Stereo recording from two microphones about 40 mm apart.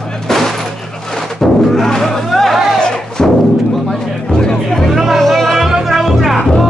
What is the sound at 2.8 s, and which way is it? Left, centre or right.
Music, centre.